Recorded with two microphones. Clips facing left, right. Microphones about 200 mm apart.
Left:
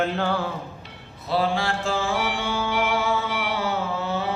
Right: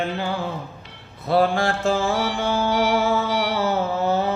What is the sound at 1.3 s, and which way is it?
Mantra, 50° right (ahead or behind).